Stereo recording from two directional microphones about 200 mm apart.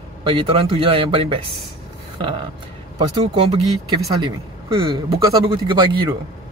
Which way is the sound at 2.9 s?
20° right (ahead or behind).